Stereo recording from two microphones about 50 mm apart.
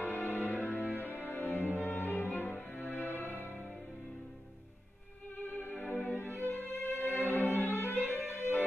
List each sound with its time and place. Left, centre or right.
0.0 s music: left
0.8 s music: right
1.1 s music: left
3.3 s music: right
5.4 s music: left
6.7 s violin: left
8.2 s music: right